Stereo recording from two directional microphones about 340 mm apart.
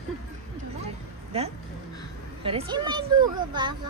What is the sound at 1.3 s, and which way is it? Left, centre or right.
A child's voice, centre.